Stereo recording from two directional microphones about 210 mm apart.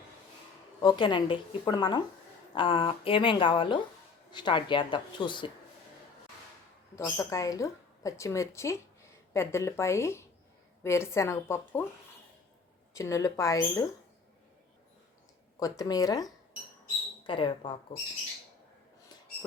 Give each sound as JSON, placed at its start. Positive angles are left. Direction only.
{"t": 0.8, "sound": "a woman's voice", "side_deg": 20}
{"t": 6.9, "sound": "speech", "side_deg": 15}
{"t": 12.9, "sound": "speech", "side_deg": 15}
{"t": 15.5, "sound": "a woman's voice", "side_deg": 15}